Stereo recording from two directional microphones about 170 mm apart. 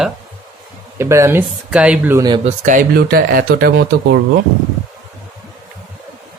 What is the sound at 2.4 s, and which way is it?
Speech, 50° right (ahead or behind).